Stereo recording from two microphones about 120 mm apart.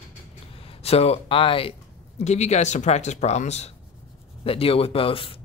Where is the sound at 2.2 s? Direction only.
70° left (ahead or behind).